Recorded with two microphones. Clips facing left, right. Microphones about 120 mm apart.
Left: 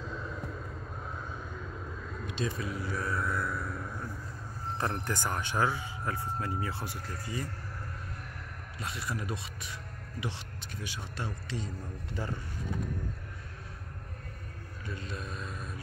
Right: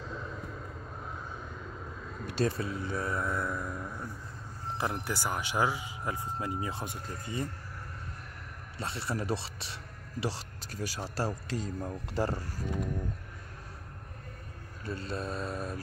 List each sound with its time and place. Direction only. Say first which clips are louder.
2.2 s vehicle: right 5 dB; 45° right (ahead or behind)
2.5 s speech: right 1 dB; 30° right (ahead or behind)
4.7 s speech: even; 10° right (ahead or behind)
8.7 s speech: right 3 dB; 30° right (ahead or behind)
14.9 s speech: right 5 dB; 35° right (ahead or behind)